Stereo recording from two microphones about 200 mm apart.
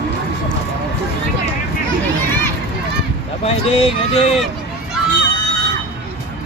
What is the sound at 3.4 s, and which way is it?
Speech, 30° left (ahead or behind).